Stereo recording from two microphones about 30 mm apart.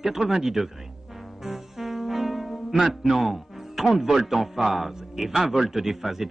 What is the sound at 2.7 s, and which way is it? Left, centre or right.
Speech, centre.